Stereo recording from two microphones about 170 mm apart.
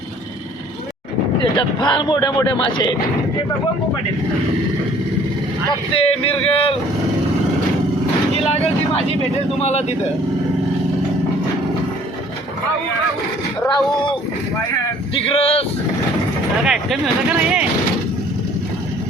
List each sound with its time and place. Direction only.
1.5 s speech: 25° left (ahead or behind)
5.9 s speech: 35° left (ahead or behind)
9.6 s speech: 40° left (ahead or behind)
13.7 s speech: 30° left (ahead or behind)
16.6 s speech: 5° right (ahead or behind)